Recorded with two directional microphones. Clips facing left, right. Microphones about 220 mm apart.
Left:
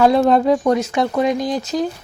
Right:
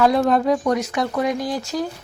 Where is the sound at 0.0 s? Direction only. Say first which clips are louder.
Left 3 dB; 25° left (ahead or behind).